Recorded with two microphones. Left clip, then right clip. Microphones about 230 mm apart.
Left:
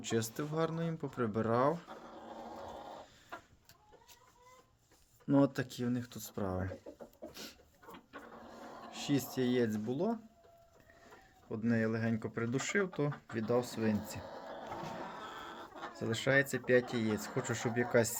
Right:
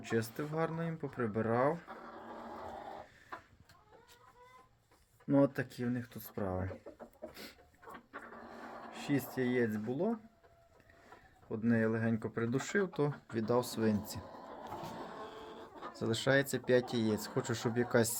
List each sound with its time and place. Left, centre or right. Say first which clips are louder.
0.0 s speech: even; centre
5.3 s speech: even; centre
8.9 s speech: left 1 dB; centre
11.4 s speech: right 2 dB; centre
16.0 s speech: even; centre